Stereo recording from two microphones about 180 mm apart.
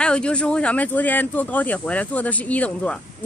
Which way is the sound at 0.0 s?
5° left (ahead or behind).